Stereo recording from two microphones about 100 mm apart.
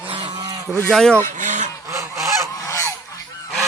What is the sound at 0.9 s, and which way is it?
Speech, 5° left (ahead or behind).